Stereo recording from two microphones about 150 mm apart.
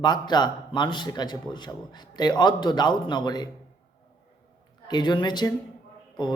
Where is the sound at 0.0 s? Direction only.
30° left (ahead or behind).